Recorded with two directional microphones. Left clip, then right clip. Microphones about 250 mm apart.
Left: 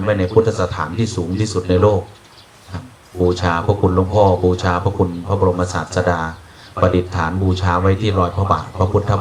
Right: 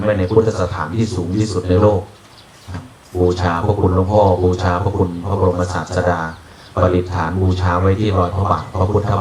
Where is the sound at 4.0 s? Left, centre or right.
Centre.